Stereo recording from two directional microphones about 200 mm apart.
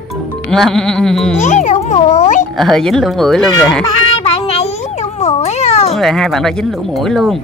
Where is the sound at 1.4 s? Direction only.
40° left (ahead or behind).